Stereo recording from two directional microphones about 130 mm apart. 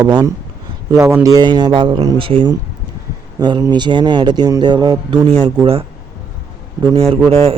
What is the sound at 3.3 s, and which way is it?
Speech, 30° right (ahead or behind).